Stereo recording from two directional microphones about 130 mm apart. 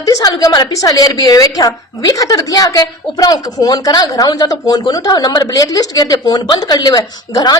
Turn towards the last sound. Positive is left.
turn(degrees=30)  # may be behind; listen again after turning